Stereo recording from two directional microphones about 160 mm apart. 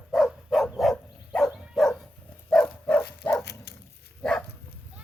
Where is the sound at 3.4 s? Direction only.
90° left.